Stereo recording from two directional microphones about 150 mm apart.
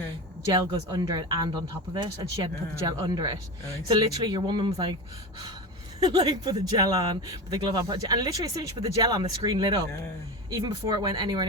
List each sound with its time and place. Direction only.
0.5 s speech: 25° right (ahead or behind)
6.0 s speech: 30° right (ahead or behind)